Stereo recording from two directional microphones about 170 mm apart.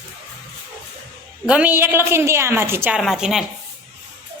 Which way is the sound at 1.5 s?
10° right (ahead or behind).